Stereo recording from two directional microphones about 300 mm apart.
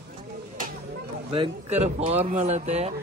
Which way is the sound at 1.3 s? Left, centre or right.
Centre.